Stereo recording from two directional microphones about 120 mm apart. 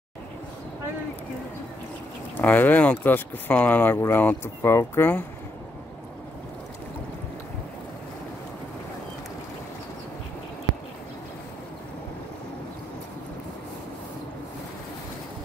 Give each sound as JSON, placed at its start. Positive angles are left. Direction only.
{"t": 2.3, "sound": "speech", "side_deg": 15}